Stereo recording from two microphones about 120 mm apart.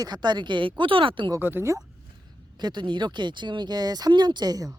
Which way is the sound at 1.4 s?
15° right (ahead or behind).